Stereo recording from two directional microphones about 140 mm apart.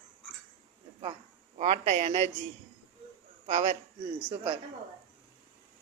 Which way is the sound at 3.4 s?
50° right (ahead or behind).